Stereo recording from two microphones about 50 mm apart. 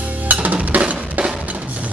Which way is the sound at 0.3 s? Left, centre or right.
Right.